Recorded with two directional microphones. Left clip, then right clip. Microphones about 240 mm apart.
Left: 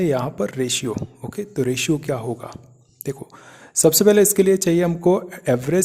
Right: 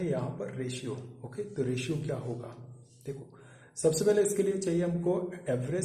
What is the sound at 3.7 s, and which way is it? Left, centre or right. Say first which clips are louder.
Speech: left 11 dB; left.